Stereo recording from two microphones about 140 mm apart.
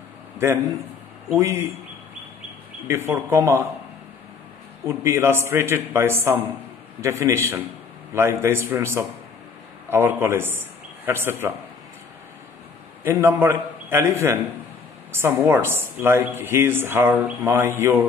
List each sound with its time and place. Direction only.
1.4 s speech: 20° right (ahead or behind)
2.9 s speech: 20° right (ahead or behind)
4.8 s a man's voice: 20° right (ahead or behind)
13.0 s speech: 15° right (ahead or behind)